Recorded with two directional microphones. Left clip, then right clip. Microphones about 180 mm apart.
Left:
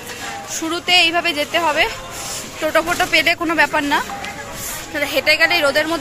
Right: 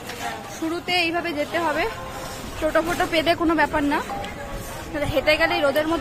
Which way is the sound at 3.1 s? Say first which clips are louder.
Left 5 dB; 20° right (ahead or behind).